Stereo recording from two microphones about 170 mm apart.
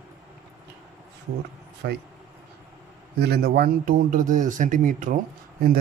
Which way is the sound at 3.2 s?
65° right (ahead or behind).